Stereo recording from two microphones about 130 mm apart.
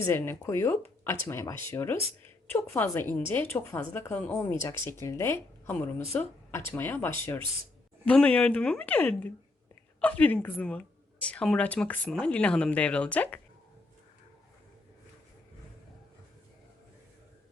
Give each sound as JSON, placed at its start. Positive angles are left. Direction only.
{"t": 0.0, "sound": "speech", "side_deg": 20}